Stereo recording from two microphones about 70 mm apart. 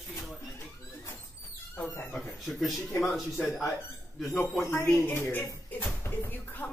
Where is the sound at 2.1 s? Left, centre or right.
Centre.